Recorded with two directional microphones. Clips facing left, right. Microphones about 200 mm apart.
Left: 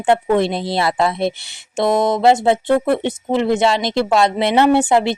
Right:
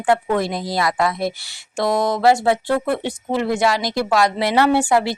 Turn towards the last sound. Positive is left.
turn(degrees=20)  # may be behind; listen again after turning